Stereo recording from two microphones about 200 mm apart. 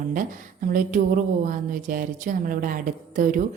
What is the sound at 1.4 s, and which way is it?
Speech, 40° right (ahead or behind).